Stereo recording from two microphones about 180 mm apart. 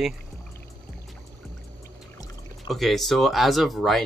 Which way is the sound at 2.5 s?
Centre (ahead or behind).